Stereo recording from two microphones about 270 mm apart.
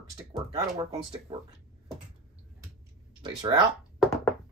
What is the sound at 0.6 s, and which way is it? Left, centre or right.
Speech, right.